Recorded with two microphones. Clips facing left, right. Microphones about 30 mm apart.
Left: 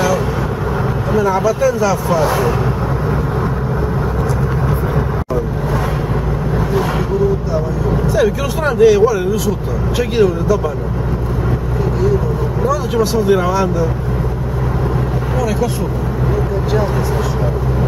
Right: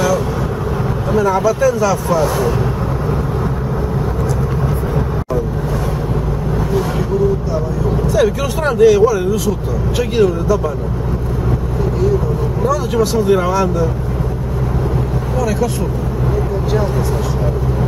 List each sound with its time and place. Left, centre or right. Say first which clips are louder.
1.3 s speech: even; centre
8.2 s speech: right 1 dB; centre
12.6 s speech: even; centre